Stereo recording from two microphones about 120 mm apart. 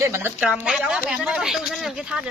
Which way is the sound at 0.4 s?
5° right (ahead or behind).